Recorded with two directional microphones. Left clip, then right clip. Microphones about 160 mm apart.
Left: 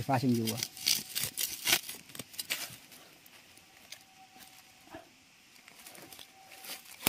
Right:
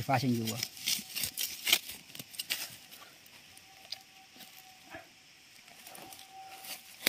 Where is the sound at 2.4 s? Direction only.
30° left (ahead or behind).